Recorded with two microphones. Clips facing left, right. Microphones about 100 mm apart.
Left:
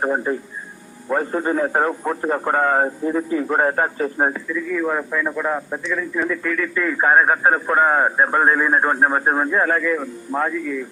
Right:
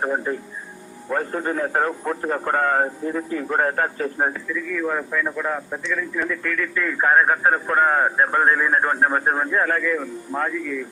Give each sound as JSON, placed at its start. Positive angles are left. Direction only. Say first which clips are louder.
{"t": 0.0, "sound": "a man's voice", "louder": "left 3 dB", "side_deg": 15}